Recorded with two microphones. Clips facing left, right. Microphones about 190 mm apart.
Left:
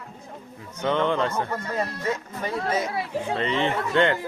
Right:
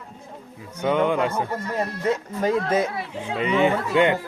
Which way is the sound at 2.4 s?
55° right (ahead or behind).